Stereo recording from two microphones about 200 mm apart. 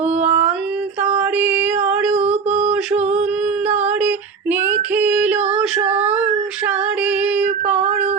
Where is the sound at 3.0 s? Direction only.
35° right (ahead or behind).